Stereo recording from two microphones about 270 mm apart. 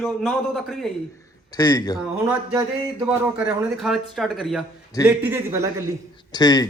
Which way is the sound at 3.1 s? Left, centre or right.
Centre.